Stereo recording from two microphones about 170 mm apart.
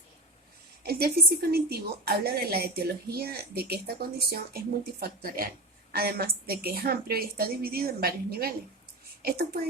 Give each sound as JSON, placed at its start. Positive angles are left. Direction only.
{"t": 0.9, "sound": "a woman's voice", "side_deg": -65}